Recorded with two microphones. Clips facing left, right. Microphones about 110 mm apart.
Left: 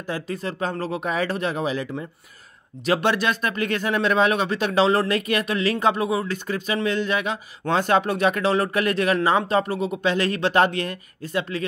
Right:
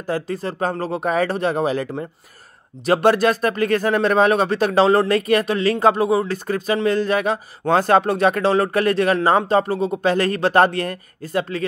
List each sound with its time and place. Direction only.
0.0 s speech: 35° right (ahead or behind)